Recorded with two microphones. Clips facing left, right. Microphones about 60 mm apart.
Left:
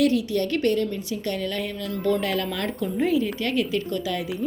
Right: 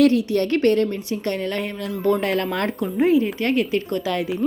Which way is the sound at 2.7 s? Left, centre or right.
Right.